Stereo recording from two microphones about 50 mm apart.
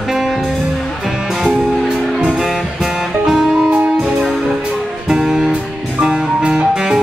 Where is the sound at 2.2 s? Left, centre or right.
Centre.